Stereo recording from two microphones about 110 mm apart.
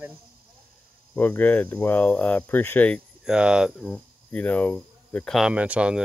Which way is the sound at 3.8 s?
10° left (ahead or behind).